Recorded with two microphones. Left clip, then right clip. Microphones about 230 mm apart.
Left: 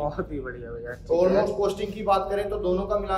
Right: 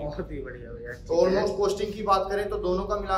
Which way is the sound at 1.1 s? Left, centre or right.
Centre.